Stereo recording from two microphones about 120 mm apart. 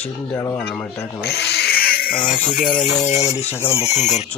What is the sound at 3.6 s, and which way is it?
Speech, 55° left (ahead or behind).